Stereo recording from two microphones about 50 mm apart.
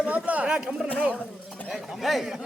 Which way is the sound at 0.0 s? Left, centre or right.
Right.